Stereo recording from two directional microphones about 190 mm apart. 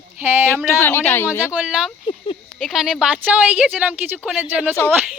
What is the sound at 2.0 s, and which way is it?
Speech, 25° left (ahead or behind).